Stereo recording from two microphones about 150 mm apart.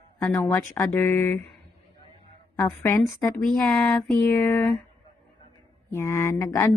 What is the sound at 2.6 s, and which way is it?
Speech, 20° left (ahead or behind).